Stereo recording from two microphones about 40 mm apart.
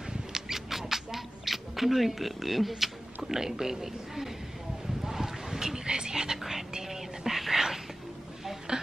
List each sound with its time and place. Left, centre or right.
0.3 s rodents: centre
5.0 s whispering: centre
8.7 s a sound: right